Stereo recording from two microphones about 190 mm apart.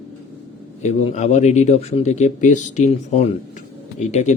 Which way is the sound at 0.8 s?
35° left (ahead or behind).